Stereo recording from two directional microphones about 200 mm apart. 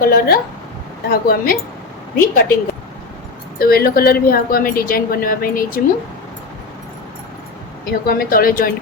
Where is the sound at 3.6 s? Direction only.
50° left (ahead or behind).